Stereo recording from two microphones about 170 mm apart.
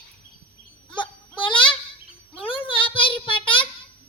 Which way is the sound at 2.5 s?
30° left (ahead or behind).